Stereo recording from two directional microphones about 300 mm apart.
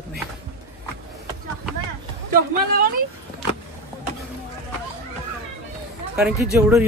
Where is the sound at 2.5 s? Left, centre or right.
Right.